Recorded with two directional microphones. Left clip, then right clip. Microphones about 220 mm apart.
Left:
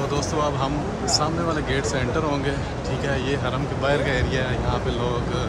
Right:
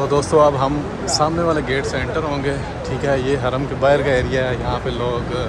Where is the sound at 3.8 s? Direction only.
10° left (ahead or behind).